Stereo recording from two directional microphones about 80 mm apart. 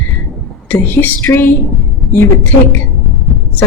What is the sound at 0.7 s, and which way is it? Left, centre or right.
Speech, left.